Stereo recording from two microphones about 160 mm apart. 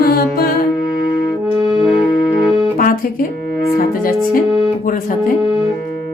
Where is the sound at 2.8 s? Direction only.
65° left (ahead or behind).